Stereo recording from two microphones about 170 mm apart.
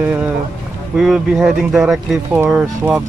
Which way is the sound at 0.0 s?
10° right (ahead or behind).